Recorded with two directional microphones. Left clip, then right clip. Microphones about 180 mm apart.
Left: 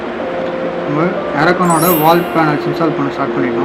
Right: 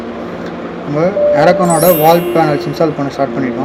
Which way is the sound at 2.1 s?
50° right (ahead or behind).